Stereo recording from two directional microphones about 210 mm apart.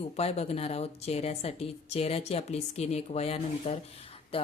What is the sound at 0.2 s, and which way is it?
A woman's voice, 30° left (ahead or behind).